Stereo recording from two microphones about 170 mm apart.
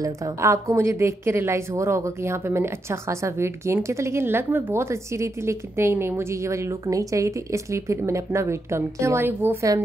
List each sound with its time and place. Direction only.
0.0 s a woman's voice: 20° right (ahead or behind)